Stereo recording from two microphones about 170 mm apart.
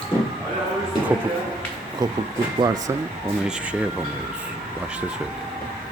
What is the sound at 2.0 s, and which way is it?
Speech, 20° right (ahead or behind).